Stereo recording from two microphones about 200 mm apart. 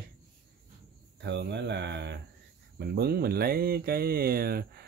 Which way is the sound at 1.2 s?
60° right (ahead or behind).